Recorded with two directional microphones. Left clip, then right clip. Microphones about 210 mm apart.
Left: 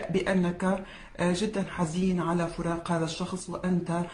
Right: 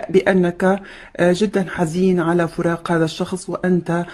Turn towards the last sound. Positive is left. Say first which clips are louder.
# right 11 dB
turn(degrees=-50)  # may be behind; listen again after turning